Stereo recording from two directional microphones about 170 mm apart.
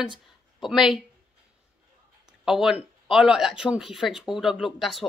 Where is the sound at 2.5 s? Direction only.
5° right (ahead or behind).